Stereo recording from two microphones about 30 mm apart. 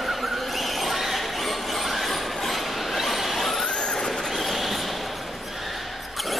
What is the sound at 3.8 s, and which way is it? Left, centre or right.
Vehicle, centre.